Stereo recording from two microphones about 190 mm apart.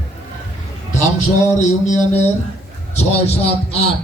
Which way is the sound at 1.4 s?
40° left (ahead or behind).